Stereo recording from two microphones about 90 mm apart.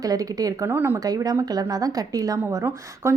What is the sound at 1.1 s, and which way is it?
Speech, 40° right (ahead or behind).